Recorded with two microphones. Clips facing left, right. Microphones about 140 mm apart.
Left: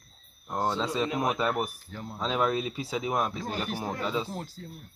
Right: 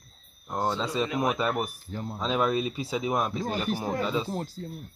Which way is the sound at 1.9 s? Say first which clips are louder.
Right 5 dB; 25° right (ahead or behind).